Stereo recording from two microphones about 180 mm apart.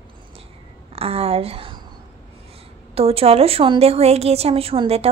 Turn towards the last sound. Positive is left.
turn(degrees=-30)  # may be behind; listen again after turning